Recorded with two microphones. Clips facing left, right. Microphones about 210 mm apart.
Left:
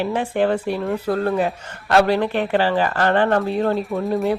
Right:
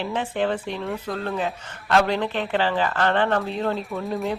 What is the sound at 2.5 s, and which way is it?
Speech, 45° left (ahead or behind).